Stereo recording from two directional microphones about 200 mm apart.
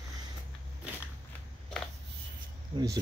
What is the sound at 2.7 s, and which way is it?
Cricket, 25° right (ahead or behind).